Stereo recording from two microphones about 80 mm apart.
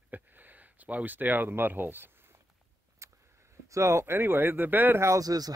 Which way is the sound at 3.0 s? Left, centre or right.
Right.